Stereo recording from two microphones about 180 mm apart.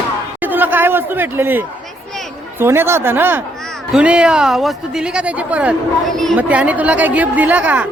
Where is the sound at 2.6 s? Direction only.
15° right (ahead or behind).